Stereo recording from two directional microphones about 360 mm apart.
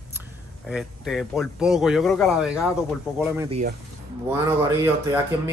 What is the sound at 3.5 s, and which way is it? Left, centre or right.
Speech, centre.